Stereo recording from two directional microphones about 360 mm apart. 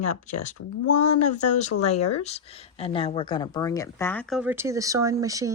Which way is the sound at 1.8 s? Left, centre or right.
Centre.